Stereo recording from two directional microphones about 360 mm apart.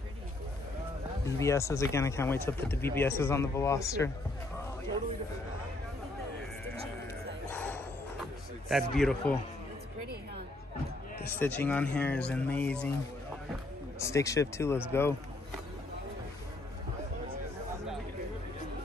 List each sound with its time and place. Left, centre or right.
1.2 s speech: centre
7.5 s a sound: centre
11.3 s speech: centre
13.9 s speech: centre